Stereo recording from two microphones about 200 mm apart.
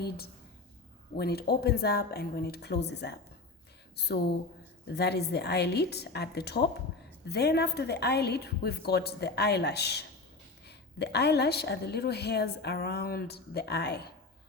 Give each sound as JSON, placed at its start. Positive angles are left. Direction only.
{"t": 1.1, "sound": "a woman's voice", "side_deg": 50}